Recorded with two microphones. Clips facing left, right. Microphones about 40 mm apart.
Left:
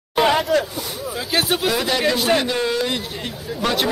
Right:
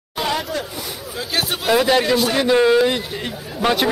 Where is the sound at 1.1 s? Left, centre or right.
Centre.